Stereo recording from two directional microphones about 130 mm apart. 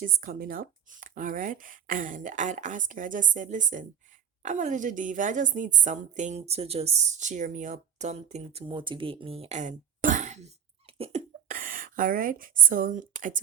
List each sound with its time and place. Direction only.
0.0 s a woman's voice: 90° right; by 11.2 s 45° right (ahead or behind)
11.4 s a woman's voice: 90° right